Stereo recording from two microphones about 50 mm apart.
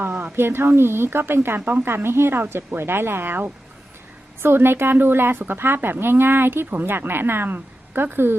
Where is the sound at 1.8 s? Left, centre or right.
Right.